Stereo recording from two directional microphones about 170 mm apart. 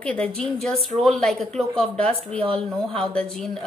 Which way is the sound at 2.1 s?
35° right (ahead or behind).